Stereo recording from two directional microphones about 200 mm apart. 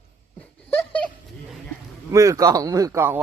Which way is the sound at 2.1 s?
15° right (ahead or behind).